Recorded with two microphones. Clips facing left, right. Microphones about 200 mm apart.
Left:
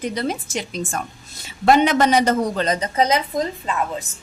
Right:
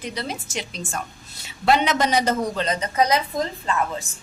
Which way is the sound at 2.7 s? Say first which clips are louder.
Right 1 dB; 30° left (ahead or behind).